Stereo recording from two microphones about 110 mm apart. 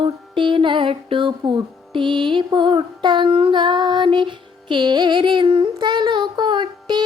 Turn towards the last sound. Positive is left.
turn(degrees=-45)  # may be behind; listen again after turning